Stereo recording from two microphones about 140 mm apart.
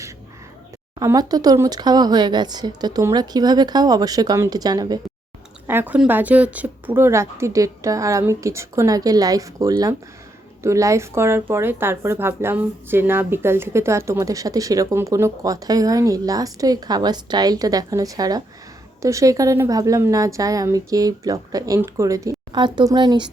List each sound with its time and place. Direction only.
0.9 s a woman's voice: 25° right (ahead or behind)
5.6 s a woman's voice: 15° right (ahead or behind); by 23.3 s 35° right (ahead or behind)